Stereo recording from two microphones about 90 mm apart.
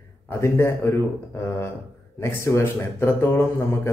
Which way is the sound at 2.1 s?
30° left (ahead or behind).